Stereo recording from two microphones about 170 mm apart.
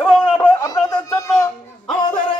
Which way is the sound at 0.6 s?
20° left (ahead or behind).